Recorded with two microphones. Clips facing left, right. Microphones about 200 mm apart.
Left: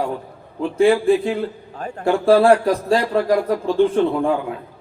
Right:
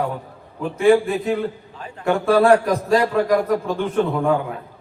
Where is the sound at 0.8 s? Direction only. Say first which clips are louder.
Left 1 dB; 30° left (ahead or behind).